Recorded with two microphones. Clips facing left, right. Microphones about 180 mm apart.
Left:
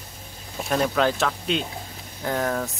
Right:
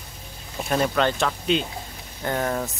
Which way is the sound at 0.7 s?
Centre (ahead or behind).